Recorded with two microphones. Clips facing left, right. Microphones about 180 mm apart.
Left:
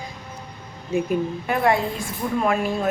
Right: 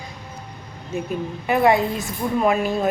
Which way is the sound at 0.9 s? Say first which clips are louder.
Left 4 dB; 10° left (ahead or behind).